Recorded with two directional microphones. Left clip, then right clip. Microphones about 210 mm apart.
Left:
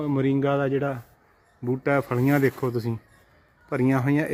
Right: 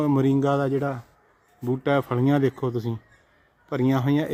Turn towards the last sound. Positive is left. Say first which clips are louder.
# even
turn(degrees=-5)  # may be behind; listen again after turning